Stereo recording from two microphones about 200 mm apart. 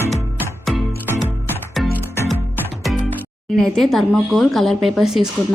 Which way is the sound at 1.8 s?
Centre (ahead or behind).